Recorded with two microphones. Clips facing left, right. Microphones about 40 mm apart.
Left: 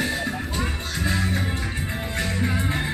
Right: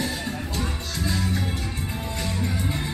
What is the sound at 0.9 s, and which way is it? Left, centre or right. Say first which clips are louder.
Music: left 2 dB; left.